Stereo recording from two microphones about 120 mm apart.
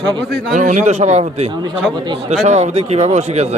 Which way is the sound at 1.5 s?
40° right (ahead or behind).